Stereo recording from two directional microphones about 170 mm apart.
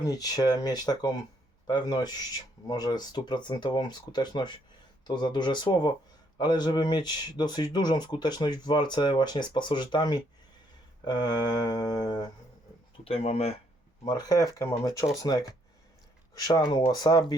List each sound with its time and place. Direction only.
0.0 s speech: 20° left (ahead or behind)
13.1 s speech: 35° left (ahead or behind)
14.1 s speech: 20° left (ahead or behind)